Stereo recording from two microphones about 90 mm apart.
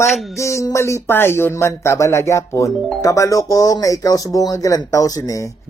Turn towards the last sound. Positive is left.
turn(degrees=40)  # may be behind; listen again after turning